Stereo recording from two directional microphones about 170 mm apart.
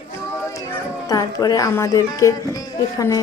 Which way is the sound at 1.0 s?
20° left (ahead or behind).